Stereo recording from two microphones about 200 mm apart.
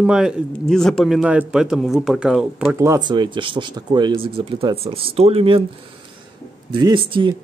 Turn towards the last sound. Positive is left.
turn(degrees=-25)  # may be behind; listen again after turning